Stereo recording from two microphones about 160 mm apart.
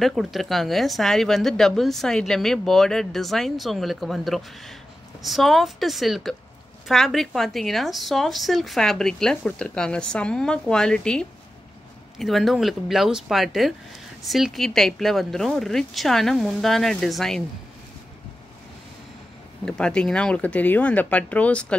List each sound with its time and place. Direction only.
0.0 s speech: centre (ahead or behind)
19.6 s speech: 5° left (ahead or behind)